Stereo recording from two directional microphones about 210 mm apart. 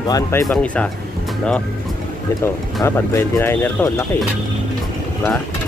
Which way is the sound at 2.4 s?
10° left (ahead or behind).